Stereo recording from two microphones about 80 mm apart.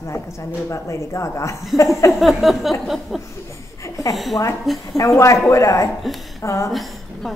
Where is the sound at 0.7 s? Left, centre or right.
Left.